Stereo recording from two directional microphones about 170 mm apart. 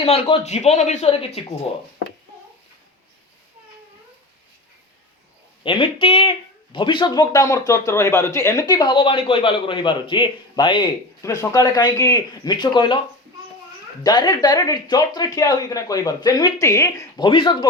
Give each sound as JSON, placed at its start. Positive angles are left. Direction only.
{"t": 0.0, "sound": "speech", "side_deg": 35}
{"t": 5.6, "sound": "speech", "side_deg": 30}
{"t": 14.0, "sound": "speech", "side_deg": 25}